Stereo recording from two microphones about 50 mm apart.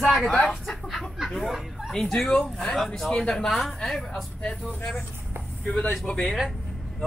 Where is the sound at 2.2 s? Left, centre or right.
Centre.